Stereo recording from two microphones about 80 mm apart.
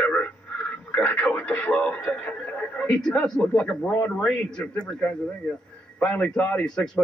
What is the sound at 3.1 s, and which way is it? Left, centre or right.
Speech, centre.